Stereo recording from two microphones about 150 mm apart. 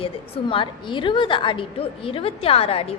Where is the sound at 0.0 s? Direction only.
35° left (ahead or behind).